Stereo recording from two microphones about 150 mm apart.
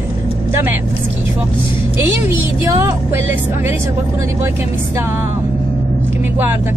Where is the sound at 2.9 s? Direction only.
15° right (ahead or behind).